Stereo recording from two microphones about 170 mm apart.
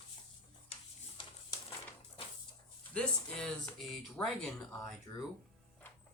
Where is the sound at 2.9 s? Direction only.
5° left (ahead or behind).